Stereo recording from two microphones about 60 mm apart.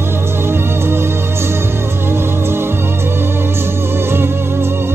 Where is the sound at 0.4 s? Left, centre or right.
Right.